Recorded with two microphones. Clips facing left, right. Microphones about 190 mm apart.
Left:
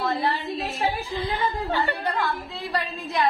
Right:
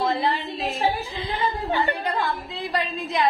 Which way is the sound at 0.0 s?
20° right (ahead or behind).